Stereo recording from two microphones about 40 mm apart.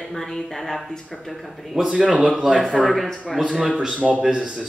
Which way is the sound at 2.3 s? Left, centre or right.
Centre.